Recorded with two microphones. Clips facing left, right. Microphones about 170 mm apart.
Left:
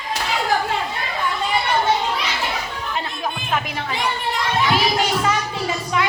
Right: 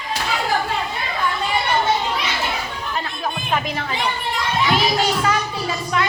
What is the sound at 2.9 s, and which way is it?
Music, 20° left (ahead or behind).